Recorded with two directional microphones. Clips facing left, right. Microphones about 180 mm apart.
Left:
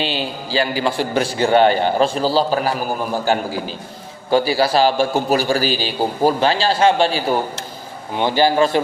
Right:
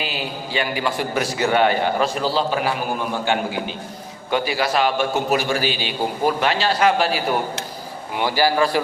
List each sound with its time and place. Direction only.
0.0 s a man's voice: 30° left (ahead or behind)